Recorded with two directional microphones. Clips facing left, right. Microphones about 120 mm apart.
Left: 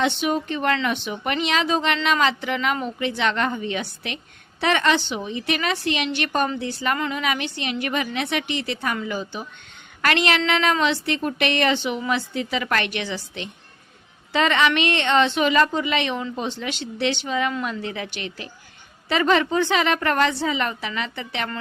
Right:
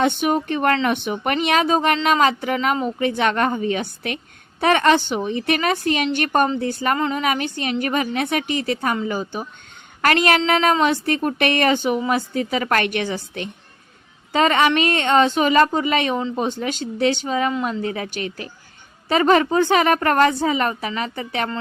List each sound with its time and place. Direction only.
0.0 s a woman's voice: 50° right (ahead or behind)
6.9 s a woman's voice: 35° right (ahead or behind)